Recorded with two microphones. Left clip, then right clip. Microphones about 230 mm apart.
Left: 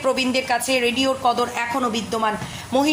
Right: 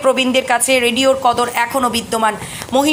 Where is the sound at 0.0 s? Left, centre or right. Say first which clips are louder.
Right 7 dB; centre.